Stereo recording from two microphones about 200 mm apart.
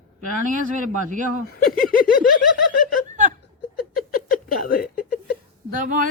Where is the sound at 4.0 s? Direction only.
45° left (ahead or behind).